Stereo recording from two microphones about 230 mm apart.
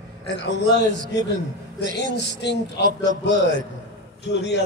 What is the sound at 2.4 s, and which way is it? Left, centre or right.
Speech, left.